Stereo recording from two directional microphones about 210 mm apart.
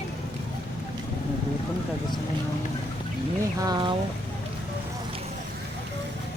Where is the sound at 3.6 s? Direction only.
20° right (ahead or behind).